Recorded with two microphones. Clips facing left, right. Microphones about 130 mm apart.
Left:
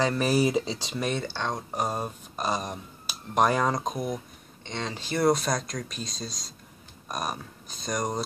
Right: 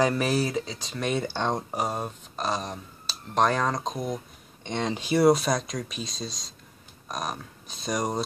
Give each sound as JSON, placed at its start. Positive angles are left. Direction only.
{"t": 0.0, "sound": "speech", "side_deg": 0}
{"t": 0.4, "sound": "speech", "side_deg": 20}
{"t": 1.1, "sound": "speech", "side_deg": -15}
{"t": 1.8, "sound": "speech", "side_deg": 0}
{"t": 4.6, "sound": "speech", "side_deg": -20}